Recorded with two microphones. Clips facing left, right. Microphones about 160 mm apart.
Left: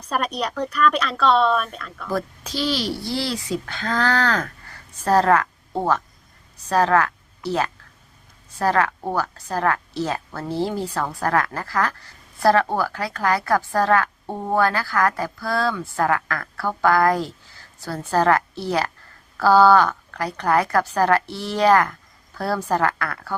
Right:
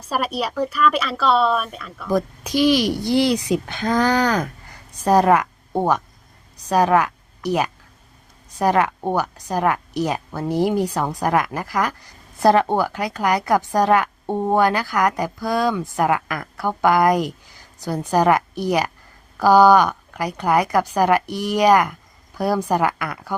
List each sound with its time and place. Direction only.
0.1 s a woman's voice: 5° right (ahead or behind)
2.0 s a woman's voice: 15° right (ahead or behind)